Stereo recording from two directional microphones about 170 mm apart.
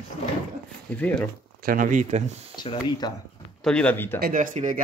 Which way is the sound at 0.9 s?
10° left (ahead or behind).